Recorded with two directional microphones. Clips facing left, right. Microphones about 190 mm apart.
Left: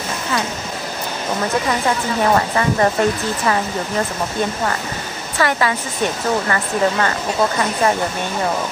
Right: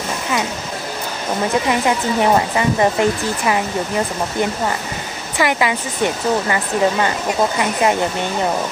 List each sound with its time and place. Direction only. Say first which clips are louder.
1.7 s speech: right 2 dB; 15° right (ahead or behind)
5.4 s speech: right 1 dB; 15° right (ahead or behind)